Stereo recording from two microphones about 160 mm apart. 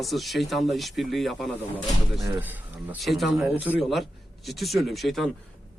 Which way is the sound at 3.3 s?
10° right (ahead or behind).